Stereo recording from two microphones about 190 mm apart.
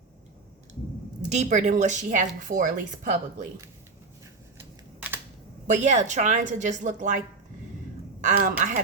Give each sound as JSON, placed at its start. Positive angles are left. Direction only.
{"t": 1.3, "sound": "a woman's voice", "side_deg": -35}
{"t": 4.9, "sound": "a sound", "side_deg": -10}
{"t": 5.6, "sound": "a woman's voice", "side_deg": -40}
{"t": 8.2, "sound": "a woman's voice", "side_deg": -45}